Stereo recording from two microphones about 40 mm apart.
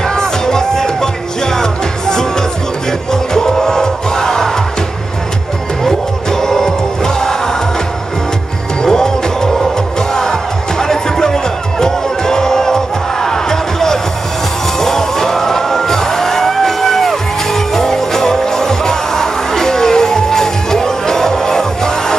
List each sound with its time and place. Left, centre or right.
0.0 s music: centre
6.4 s music: centre
8.8 s music: centre
10.8 s music: centre